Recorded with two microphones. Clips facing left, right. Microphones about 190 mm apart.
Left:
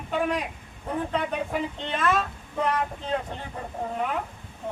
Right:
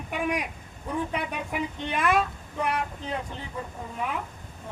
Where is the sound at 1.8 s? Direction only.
10° right (ahead or behind).